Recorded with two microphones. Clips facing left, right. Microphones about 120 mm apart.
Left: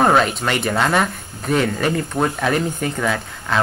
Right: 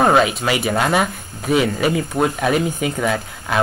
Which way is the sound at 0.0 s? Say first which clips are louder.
Right 1 dB; 5° right (ahead or behind).